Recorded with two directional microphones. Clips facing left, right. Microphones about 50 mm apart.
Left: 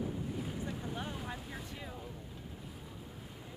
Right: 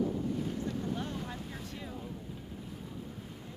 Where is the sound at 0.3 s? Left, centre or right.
Centre.